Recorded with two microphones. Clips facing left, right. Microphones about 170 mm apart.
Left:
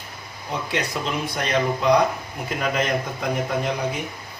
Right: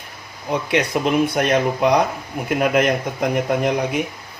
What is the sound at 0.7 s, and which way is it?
A man's voice, 60° right (ahead or behind).